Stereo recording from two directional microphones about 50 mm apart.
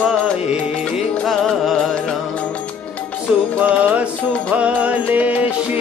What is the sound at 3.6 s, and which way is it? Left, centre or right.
Music, right.